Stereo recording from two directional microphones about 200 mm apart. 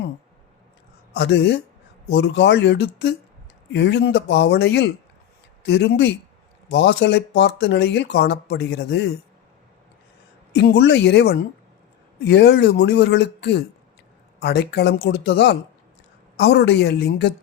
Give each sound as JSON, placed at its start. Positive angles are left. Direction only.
{"t": 1.1, "sound": "speech", "side_deg": 60}
{"t": 10.5, "sound": "speech", "side_deg": 55}